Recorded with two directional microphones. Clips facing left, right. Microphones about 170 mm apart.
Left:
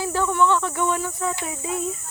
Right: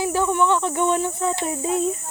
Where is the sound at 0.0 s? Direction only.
15° right (ahead or behind).